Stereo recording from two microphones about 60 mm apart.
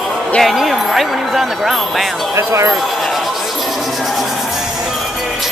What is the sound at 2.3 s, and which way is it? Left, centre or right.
Speech, right.